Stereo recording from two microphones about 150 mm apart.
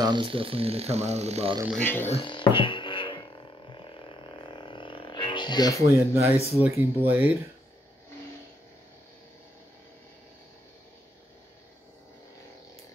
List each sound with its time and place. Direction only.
0.0 s speech: 30° right (ahead or behind)
1.8 s speech: 15° left (ahead or behind)
2.0 s music: 35° left (ahead or behind)
5.9 s speech: 20° right (ahead or behind)